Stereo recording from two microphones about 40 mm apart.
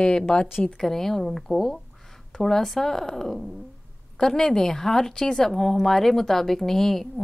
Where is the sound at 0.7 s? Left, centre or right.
Centre.